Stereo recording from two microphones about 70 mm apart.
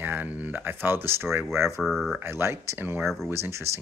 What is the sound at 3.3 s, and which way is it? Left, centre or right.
Speech, right.